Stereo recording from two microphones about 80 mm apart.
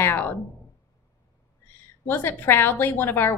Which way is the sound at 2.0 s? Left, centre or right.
Left.